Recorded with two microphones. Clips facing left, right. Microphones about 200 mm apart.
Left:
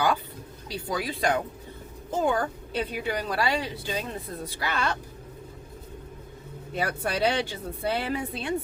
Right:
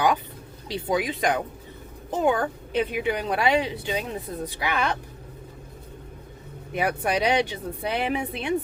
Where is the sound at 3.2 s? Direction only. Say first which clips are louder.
Right 6 dB; 20° right (ahead or behind).